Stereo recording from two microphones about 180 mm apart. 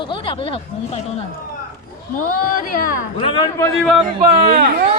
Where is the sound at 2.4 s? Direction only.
50° left (ahead or behind).